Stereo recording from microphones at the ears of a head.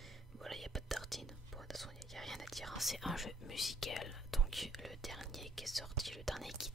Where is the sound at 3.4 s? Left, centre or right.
Left.